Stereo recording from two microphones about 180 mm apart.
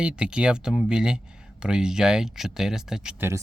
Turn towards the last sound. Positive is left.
turn(degrees=-5)  # may be behind; listen again after turning